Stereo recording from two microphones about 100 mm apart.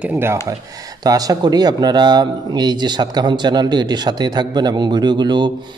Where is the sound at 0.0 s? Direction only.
20° right (ahead or behind).